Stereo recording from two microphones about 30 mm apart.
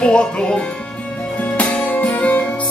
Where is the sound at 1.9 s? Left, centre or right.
Left.